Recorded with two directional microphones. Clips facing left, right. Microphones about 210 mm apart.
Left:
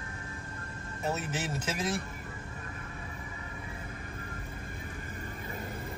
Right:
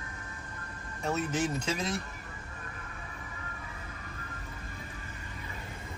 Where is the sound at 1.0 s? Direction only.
5° left (ahead or behind).